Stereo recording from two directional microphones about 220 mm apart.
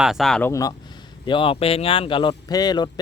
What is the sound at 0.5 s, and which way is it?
Speech, 15° left (ahead or behind).